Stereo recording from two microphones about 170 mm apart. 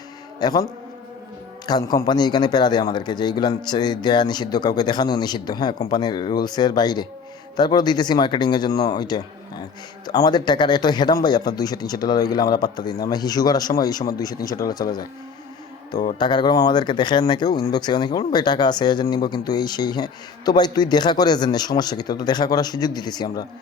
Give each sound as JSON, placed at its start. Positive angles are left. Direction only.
{"t": 0.3, "sound": "a man's voice", "side_deg": 25}
{"t": 1.6, "sound": "speech", "side_deg": 25}
{"t": 16.1, "sound": "speech", "side_deg": 25}